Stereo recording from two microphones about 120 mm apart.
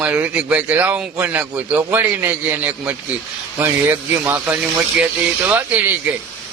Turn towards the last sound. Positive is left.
turn(degrees=-15)  # may be behind; listen again after turning